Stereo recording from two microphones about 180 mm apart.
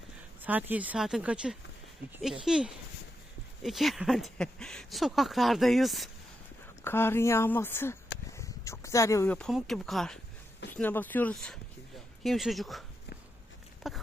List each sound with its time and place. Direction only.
0.4 s speech: 10° right (ahead or behind)
6.8 s a woman's voice: 10° left (ahead or behind)
8.3 s a sound: 15° left (ahead or behind)
9.5 s a woman's voice: centre (ahead or behind)
13.8 s speech: centre (ahead or behind)